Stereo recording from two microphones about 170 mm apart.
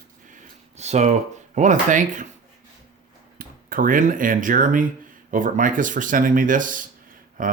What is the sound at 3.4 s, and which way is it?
Speech, 55° right (ahead or behind).